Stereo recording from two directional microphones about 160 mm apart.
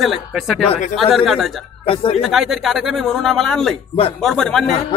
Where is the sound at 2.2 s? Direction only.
Centre (ahead or behind).